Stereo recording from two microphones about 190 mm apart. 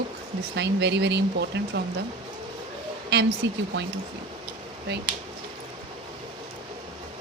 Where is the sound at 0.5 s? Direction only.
65° right (ahead or behind).